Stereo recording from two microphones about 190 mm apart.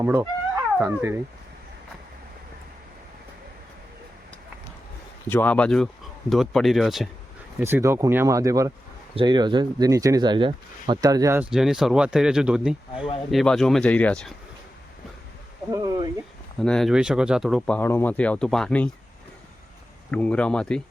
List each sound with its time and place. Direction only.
0.0 s speech: 15° right (ahead or behind)
5.3 s speech: 10° left (ahead or behind)
7.6 s speech: 15° right (ahead or behind)
11.5 s speech: 5° right (ahead or behind)
15.7 s a sound: 20° right (ahead or behind)
16.6 s speech: 5° left (ahead or behind)
17.7 s speech: 10° left (ahead or behind)
20.1 s speech: 5° left (ahead or behind)